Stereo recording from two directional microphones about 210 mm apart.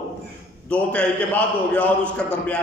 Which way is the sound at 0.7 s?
5° left (ahead or behind).